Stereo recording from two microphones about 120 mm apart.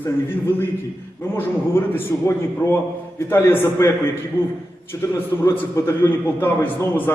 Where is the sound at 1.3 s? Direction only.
15° left (ahead or behind).